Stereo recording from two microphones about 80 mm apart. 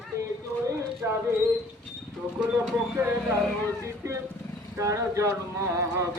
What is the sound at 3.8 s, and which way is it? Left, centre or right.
Speech, right.